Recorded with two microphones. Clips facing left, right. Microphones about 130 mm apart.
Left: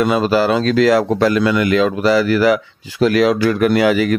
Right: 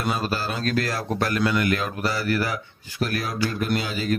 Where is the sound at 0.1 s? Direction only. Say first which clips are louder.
Left 12 dB; 90° left.